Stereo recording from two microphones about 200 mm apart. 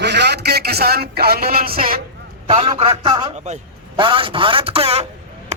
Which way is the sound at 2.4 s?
30° right (ahead or behind).